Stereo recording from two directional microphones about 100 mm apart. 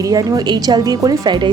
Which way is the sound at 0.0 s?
35° right (ahead or behind).